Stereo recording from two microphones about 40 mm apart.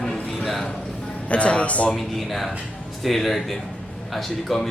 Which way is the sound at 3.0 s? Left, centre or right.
Centre.